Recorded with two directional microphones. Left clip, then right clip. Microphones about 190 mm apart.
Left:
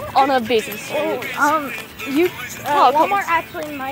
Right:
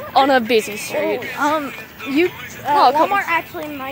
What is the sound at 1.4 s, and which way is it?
Speech, 15° right (ahead or behind).